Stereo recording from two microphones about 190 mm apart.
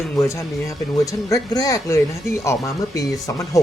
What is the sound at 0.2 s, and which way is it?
Speech, 15° left (ahead or behind).